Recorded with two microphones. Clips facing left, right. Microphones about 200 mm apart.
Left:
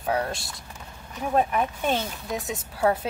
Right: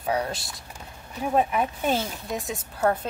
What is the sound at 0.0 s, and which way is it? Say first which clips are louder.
Speech: even; centre (ahead or behind).